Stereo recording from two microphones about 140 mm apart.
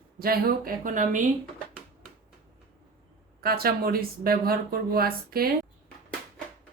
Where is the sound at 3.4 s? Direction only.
90° right.